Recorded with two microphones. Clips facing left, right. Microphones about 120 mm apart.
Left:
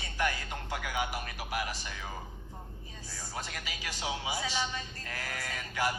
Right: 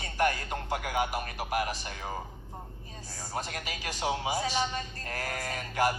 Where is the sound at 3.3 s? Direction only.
50° right (ahead or behind).